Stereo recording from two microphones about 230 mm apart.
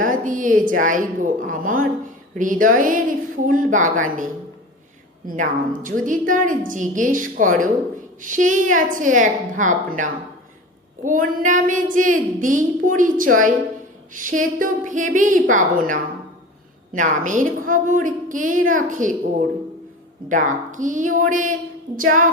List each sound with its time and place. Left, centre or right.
0.0 s speech: right
20.2 s speech: right